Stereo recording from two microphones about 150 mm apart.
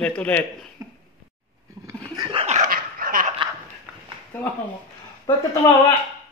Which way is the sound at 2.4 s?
50° right (ahead or behind).